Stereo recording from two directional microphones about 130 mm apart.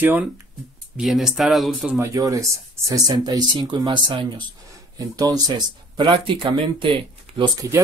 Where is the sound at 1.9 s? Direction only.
25° right (ahead or behind); by 6.9 s 40° right (ahead or behind).